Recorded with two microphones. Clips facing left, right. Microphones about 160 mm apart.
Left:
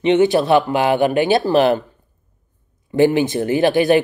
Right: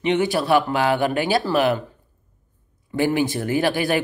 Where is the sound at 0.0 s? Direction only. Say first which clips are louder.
Left 6 dB; 25° left (ahead or behind).